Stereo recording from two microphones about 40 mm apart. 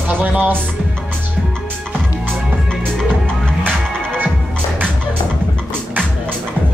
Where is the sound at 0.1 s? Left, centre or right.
Right.